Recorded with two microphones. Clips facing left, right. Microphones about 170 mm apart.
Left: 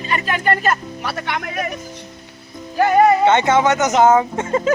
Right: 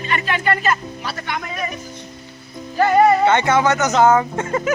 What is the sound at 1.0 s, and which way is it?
Speech, 65° left (ahead or behind).